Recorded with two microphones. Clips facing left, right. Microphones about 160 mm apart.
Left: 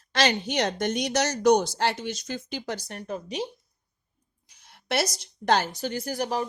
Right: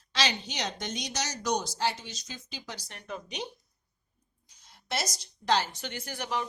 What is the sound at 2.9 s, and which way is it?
Speech, 40° left (ahead or behind).